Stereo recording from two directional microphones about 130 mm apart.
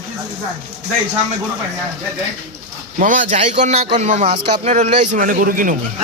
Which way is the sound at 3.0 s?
80° right.